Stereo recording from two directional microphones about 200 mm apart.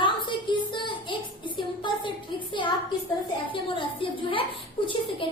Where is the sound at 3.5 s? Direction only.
25° left (ahead or behind).